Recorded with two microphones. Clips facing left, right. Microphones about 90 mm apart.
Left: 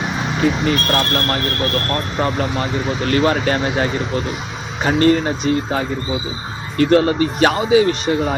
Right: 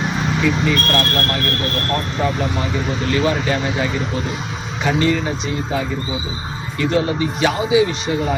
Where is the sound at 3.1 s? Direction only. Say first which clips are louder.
Left 2 dB; 50° left (ahead or behind).